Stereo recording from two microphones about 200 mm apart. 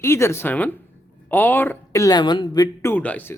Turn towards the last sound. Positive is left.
turn(degrees=10)  # may be behind; listen again after turning